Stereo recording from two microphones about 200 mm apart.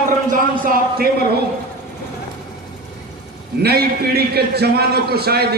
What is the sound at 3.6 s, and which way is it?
A man's voice, 50° right (ahead or behind).